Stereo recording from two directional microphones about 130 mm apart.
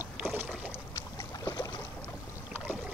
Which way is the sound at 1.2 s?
25° left (ahead or behind).